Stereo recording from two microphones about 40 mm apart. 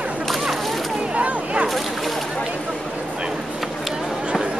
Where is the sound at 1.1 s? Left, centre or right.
Right.